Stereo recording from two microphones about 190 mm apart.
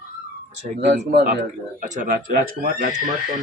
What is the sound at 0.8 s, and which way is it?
Speech, 60° right (ahead or behind).